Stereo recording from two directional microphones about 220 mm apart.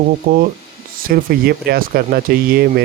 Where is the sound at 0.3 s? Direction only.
40° right (ahead or behind).